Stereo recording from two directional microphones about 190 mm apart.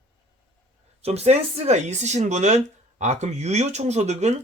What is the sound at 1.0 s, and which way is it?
Speech, 35° right (ahead or behind).